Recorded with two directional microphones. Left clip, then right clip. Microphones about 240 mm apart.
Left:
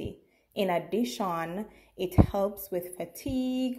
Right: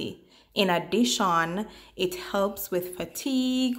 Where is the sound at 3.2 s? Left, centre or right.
Left.